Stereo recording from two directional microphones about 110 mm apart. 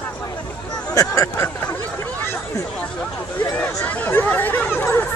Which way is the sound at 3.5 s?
15° left (ahead or behind).